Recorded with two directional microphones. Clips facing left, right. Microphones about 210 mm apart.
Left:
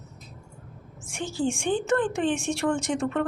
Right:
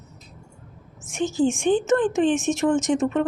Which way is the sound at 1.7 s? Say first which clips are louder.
Right 3 dB; 20° right (ahead or behind).